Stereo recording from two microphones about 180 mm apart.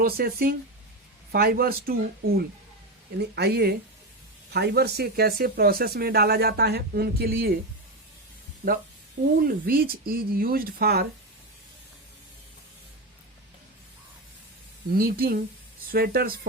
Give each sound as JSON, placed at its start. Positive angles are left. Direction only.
{"t": 0.0, "sound": "speech", "side_deg": -55}
{"t": 9.4, "sound": "speech", "side_deg": -55}
{"t": 14.9, "sound": "speech", "side_deg": -55}